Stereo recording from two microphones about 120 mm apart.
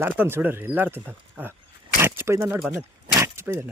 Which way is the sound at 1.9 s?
20° right (ahead or behind).